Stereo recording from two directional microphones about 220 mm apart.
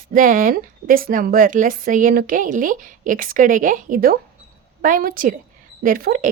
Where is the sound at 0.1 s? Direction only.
40° right (ahead or behind).